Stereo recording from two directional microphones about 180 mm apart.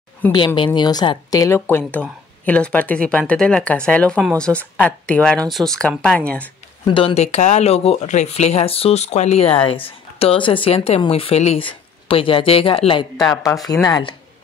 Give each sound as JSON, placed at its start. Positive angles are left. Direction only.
{"t": 0.7, "sound": "a woman's voice", "side_deg": 25}
{"t": 6.9, "sound": "a woman's voice", "side_deg": 30}
{"t": 13.3, "sound": "speech", "side_deg": 20}